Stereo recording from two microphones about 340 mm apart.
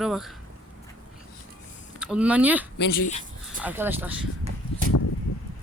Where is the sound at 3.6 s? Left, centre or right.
Centre.